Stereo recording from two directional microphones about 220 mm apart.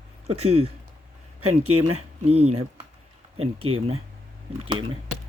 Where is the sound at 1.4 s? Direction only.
90° right.